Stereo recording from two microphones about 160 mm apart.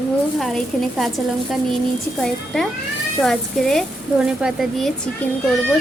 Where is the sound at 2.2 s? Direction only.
Centre (ahead or behind).